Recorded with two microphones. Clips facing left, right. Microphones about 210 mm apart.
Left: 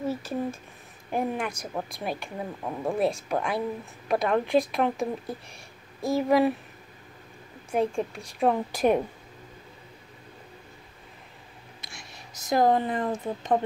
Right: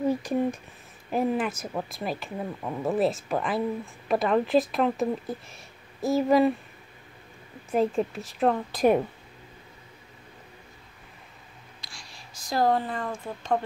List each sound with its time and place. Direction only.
0.1 s speech: 15° right (ahead or behind)
1.1 s speech: 5° right (ahead or behind)
7.7 s speech: centre (ahead or behind)
11.8 s speech: 20° left (ahead or behind)